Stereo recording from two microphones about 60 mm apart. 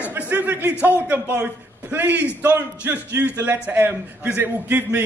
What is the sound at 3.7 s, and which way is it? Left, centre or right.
A man's voice, right.